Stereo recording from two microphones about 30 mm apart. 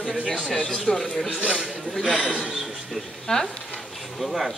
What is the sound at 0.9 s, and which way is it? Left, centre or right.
Speech, left.